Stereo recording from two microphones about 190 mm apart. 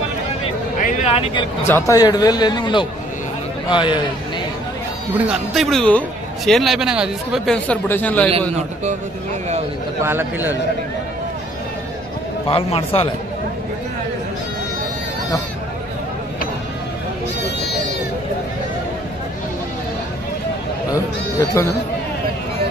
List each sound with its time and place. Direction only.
1.0 s speech: 30° left (ahead or behind)
1.7 s a man's voice: 15° left (ahead or behind)
5.1 s a man's voice: centre (ahead or behind)
10.0 s a man's voice: 10° right (ahead or behind)
12.4 s a man's voice: 30° left (ahead or behind)
20.9 s a sound: 20° left (ahead or behind)